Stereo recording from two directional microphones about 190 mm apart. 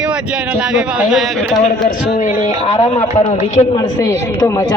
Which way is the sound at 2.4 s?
35° left (ahead or behind).